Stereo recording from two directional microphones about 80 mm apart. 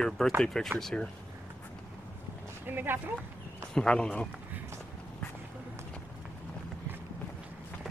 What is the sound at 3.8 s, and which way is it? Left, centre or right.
Speech, centre.